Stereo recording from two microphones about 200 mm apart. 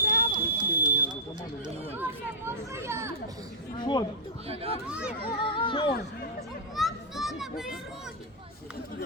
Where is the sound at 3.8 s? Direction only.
20° left (ahead or behind).